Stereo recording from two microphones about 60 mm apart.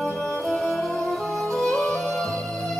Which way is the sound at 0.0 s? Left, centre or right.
Centre.